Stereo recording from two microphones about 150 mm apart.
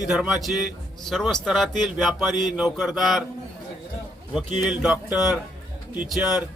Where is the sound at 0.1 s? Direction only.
5° right (ahead or behind).